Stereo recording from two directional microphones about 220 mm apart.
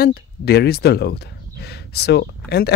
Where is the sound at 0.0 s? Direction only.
45° left (ahead or behind).